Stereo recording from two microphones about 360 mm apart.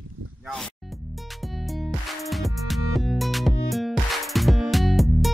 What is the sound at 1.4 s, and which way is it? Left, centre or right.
Music, centre.